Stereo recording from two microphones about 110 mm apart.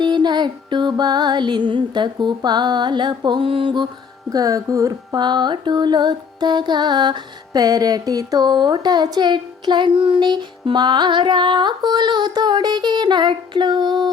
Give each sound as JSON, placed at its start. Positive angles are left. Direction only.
{"t": 0.0, "sound": "music", "side_deg": -40}
{"t": 4.3, "sound": "music", "side_deg": -30}